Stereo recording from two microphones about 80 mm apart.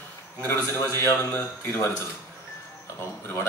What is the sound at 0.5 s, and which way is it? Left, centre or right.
A man's voice, left.